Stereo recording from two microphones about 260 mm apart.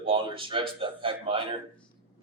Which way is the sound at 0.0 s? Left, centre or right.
Centre.